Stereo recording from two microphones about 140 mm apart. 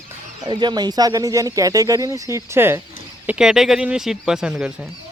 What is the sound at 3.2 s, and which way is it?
Speech, 5° right (ahead or behind).